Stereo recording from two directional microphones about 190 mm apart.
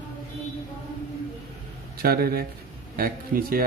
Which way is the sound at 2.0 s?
55° right (ahead or behind).